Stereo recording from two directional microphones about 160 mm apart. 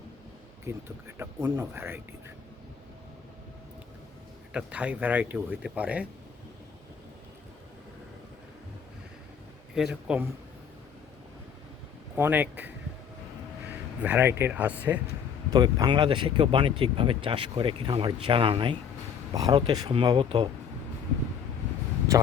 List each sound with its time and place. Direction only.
0.6 s speech: 15° right (ahead or behind)
4.5 s speech: 10° right (ahead or behind)
9.7 s a man's voice: 5° right (ahead or behind)
12.1 s speech: 10° right (ahead or behind)
14.0 s speech: 10° right (ahead or behind)
15.5 s speech: 25° right (ahead or behind)
22.1 s vehicle: 20° right (ahead or behind)